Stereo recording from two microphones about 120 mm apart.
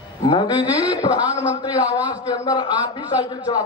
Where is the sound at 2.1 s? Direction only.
25° left (ahead or behind).